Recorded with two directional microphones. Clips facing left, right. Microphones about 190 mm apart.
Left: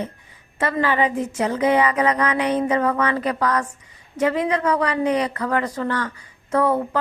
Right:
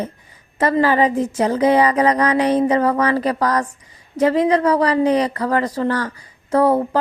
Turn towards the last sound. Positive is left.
turn(degrees=-35)  # may be behind; listen again after turning